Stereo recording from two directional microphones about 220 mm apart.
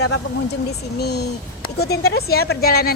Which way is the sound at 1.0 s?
45° left (ahead or behind).